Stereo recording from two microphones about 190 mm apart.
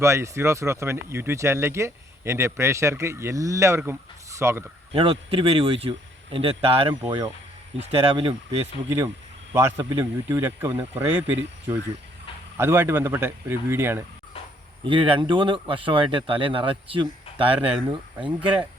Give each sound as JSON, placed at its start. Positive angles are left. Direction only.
{"t": 0.0, "sound": "speech", "side_deg": -15}
{"t": 4.9, "sound": "speech", "side_deg": -30}
{"t": 9.6, "sound": "speech", "side_deg": -15}
{"t": 14.8, "sound": "speech", "side_deg": -25}